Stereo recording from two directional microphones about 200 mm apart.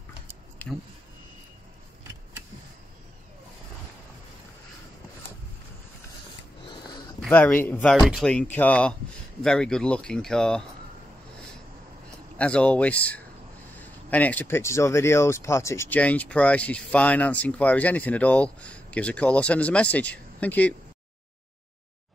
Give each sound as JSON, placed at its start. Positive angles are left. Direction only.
{"t": 0.6, "sound": "a sound", "side_deg": 10}
{"t": 7.2, "sound": "speech", "side_deg": 5}
{"t": 12.4, "sound": "speech", "side_deg": 5}